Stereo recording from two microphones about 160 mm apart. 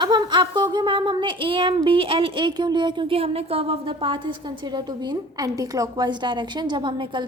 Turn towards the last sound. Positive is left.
turn(degrees=-30)  # may be behind; listen again after turning